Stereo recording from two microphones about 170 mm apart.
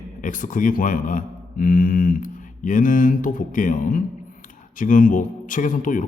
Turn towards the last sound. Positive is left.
turn(degrees=50)  # may be behind; listen again after turning